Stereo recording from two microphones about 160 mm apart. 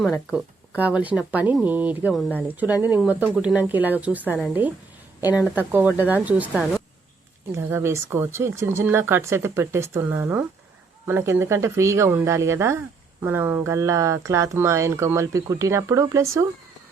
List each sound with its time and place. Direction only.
0.3 s speech: 5° right (ahead or behind)
7.5 s speech: 15° right (ahead or behind)